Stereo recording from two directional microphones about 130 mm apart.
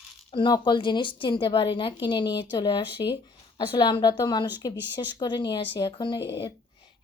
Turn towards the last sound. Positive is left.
turn(degrees=45)  # may be behind; listen again after turning